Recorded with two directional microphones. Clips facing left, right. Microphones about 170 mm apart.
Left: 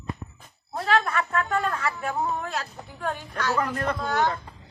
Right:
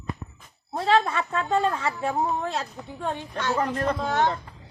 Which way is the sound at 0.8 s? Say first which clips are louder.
Right 2 dB; 25° right (ahead or behind).